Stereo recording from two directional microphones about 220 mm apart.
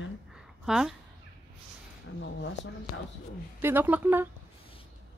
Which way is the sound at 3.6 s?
10° right (ahead or behind).